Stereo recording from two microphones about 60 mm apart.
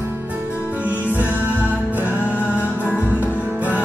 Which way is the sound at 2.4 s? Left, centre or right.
Left.